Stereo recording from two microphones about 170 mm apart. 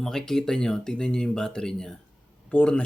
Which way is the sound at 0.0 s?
Centre (ahead or behind).